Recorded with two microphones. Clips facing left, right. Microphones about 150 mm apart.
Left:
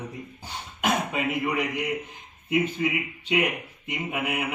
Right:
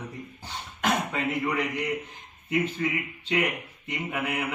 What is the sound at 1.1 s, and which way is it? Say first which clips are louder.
Speech: left 1 dB; 15° left (ahead or behind).